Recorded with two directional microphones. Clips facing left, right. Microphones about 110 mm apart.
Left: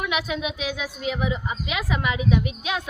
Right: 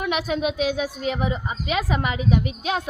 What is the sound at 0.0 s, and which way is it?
A woman's voice, 40° right (ahead or behind).